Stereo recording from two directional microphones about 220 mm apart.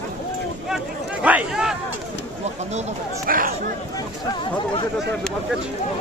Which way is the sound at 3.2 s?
40° right (ahead or behind).